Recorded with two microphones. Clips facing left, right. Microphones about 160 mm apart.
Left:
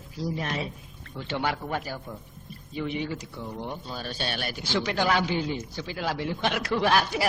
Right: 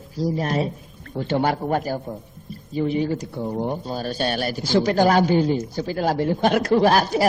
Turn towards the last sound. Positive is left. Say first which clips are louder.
# right 7 dB
turn(degrees=-40)  # may be behind; listen again after turning